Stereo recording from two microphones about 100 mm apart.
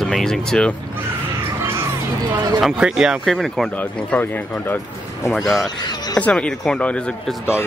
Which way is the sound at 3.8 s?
20° left (ahead or behind).